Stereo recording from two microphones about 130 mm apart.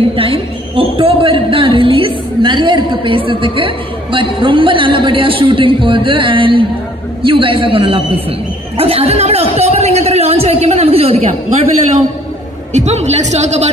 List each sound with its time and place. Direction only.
0.1 s a man's voice: 45° right (ahead or behind)
12.7 s speech: 60° right (ahead or behind)